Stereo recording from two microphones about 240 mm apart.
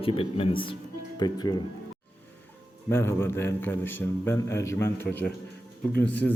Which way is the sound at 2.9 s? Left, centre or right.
Centre.